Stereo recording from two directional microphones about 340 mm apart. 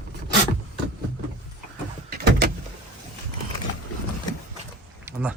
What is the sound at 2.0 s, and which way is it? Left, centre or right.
Door, right.